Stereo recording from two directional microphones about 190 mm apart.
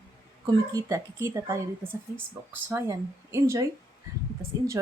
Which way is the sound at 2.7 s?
15° right (ahead or behind).